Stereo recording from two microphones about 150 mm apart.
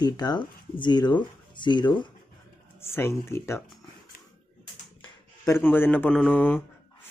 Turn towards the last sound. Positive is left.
turn(degrees=10)  # may be behind; listen again after turning